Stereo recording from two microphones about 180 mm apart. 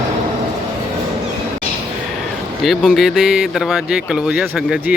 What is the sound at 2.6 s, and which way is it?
A man's voice, centre (ahead or behind).